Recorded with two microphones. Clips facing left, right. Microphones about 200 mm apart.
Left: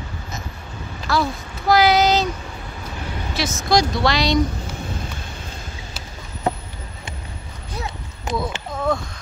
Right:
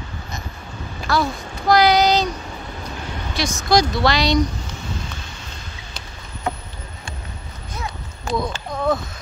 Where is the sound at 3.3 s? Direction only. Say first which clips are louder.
Right 1 dB; centre (ahead or behind).